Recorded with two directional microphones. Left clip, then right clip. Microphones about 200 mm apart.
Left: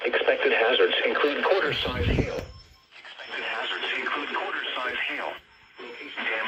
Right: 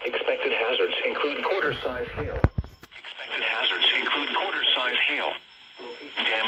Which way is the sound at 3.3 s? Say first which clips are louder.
Right 5 dB; 10° right (ahead or behind).